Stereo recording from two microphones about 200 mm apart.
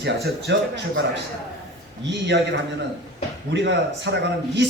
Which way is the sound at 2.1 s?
60° right (ahead or behind).